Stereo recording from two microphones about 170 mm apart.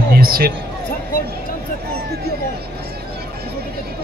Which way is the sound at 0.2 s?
60° right (ahead or behind).